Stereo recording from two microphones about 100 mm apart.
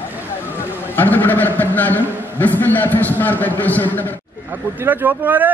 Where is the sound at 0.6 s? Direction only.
20° left (ahead or behind).